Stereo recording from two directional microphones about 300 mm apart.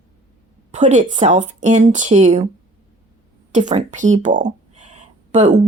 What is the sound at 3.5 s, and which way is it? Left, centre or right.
Speech, right.